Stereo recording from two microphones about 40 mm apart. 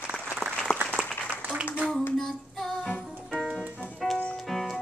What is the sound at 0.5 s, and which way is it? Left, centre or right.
Applause, centre.